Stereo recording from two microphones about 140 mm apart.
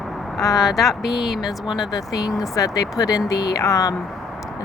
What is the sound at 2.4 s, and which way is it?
Speech, 25° left (ahead or behind).